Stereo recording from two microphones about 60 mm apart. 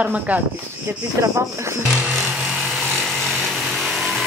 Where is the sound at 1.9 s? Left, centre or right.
Centre.